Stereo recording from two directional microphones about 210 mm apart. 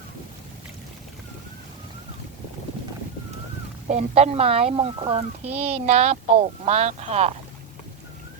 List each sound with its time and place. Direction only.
3.8 s a child's voice: 30° right (ahead or behind)